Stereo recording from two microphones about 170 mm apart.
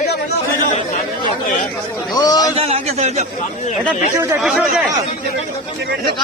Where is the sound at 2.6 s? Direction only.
35° right (ahead or behind).